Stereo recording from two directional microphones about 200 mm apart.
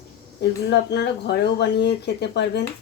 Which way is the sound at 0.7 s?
55° left (ahead or behind).